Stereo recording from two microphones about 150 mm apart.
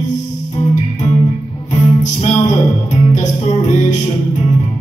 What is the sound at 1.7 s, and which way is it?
Music, 50° left (ahead or behind).